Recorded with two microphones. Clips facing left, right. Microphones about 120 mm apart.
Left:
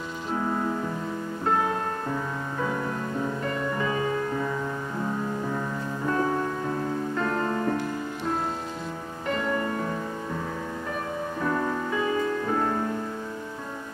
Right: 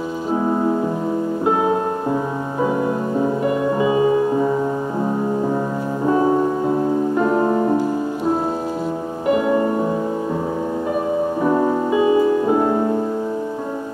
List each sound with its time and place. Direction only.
0.4 s music: 25° right (ahead or behind)
3.2 s music: 20° right (ahead or behind)
6.0 s music: 20° right (ahead or behind)
9.3 s music: 20° right (ahead or behind)
11.4 s music: 25° right (ahead or behind)